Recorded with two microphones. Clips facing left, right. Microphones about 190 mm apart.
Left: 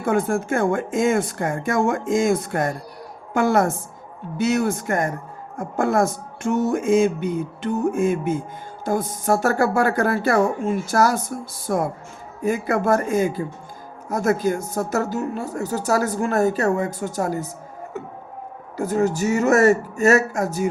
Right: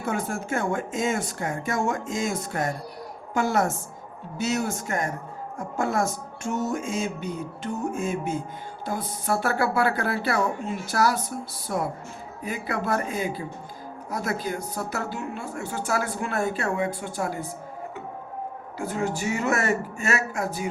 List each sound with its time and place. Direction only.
0.0 s speech: 50° left (ahead or behind)
18.8 s speech: 40° left (ahead or behind)